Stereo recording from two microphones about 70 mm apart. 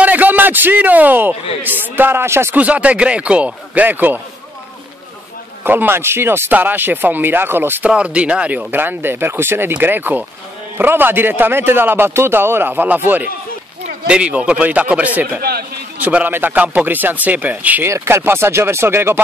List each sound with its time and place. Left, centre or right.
0.0 s a man's voice: right
2.5 s speech: centre
5.6 s a man's voice: right
7.9 s a man's voice: centre
17.8 s a man's voice: right